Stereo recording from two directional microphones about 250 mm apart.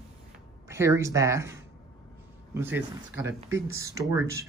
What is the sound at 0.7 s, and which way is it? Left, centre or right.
Speech, centre.